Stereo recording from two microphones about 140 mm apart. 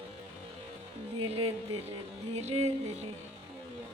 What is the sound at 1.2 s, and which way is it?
Music, 45° right (ahead or behind).